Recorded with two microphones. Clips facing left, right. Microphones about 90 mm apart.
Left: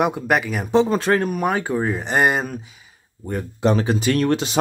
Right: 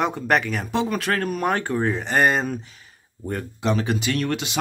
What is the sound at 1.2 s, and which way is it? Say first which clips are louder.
Speech: left 2 dB; 5° left (ahead or behind).